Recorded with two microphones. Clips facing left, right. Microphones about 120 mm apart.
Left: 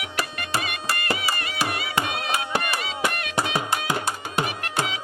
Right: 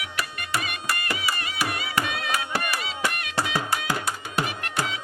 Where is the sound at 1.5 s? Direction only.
25° left (ahead or behind).